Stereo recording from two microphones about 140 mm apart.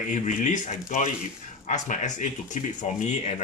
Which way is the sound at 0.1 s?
65° left (ahead or behind).